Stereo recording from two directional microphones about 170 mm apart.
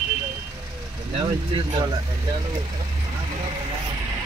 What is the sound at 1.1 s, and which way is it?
Speech, 25° right (ahead or behind).